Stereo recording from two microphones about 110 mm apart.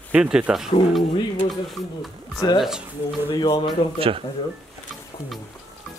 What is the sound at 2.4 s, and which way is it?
Speech, 40° left (ahead or behind).